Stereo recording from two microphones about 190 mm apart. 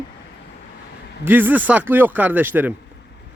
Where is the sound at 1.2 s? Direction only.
10° right (ahead or behind).